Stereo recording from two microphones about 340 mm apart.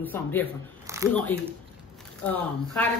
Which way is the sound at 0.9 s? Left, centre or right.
Centre.